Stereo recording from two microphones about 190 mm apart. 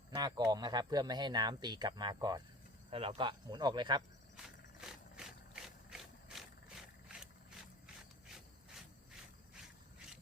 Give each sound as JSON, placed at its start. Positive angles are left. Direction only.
{"t": 0.1, "sound": "speech", "side_deg": -20}
{"t": 4.4, "sound": "ratchet", "side_deg": 0}